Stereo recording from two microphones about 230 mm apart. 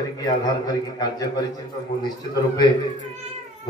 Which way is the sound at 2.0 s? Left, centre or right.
Centre.